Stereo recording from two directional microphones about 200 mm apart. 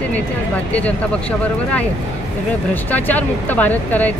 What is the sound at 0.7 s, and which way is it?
Speech, 5° left (ahead or behind).